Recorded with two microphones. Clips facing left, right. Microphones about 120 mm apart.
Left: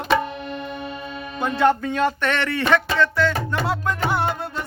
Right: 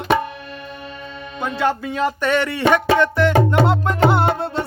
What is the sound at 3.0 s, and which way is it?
Music, 20° right (ahead or behind).